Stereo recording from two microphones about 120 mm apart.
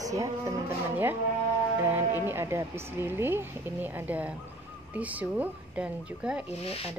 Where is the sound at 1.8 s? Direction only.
20° right (ahead or behind).